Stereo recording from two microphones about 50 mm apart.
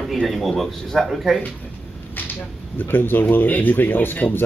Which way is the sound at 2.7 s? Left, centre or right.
Left.